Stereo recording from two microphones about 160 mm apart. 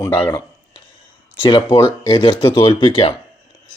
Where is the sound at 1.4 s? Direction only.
30° left (ahead or behind).